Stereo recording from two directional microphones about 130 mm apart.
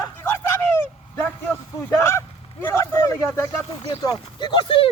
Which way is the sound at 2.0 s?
20° left (ahead or behind).